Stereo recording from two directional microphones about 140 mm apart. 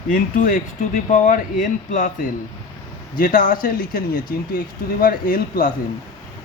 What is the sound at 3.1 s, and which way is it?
Speech, 85° left.